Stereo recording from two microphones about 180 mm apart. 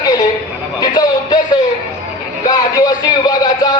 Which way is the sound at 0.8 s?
25° left (ahead or behind).